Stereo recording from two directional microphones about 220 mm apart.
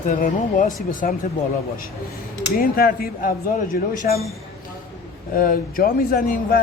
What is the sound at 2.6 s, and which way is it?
Speech, 40° left (ahead or behind).